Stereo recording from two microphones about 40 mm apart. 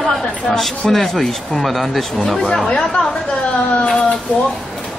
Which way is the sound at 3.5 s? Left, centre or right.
Left.